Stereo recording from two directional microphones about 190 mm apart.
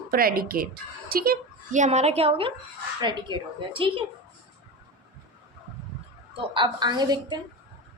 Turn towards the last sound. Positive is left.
turn(degrees=-20)  # may be behind; listen again after turning